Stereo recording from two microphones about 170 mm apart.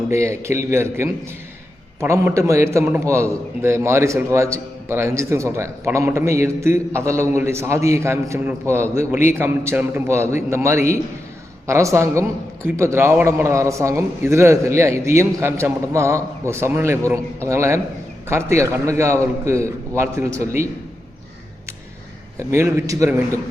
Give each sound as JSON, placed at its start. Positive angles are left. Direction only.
{"t": 0.1, "sound": "a man's voice", "side_deg": -15}
{"t": 22.4, "sound": "a man's voice", "side_deg": -15}